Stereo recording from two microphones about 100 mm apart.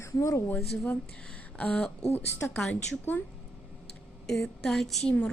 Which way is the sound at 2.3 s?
25° left (ahead or behind).